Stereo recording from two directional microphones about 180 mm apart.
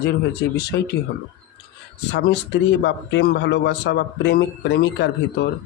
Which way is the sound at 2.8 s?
75° left (ahead or behind).